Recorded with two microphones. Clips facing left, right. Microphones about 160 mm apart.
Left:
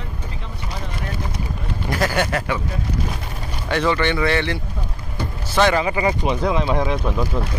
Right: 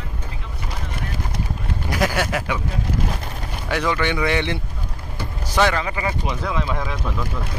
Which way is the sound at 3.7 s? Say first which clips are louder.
Left 2 dB; 10° right (ahead or behind).